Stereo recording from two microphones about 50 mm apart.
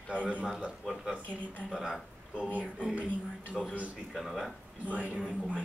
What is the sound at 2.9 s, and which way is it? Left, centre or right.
Speech, right.